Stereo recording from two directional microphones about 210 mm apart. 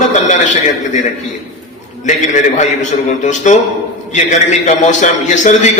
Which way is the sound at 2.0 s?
35° left (ahead or behind).